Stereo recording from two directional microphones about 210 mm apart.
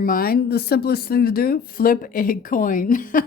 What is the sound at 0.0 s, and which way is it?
Speech, 45° left (ahead or behind).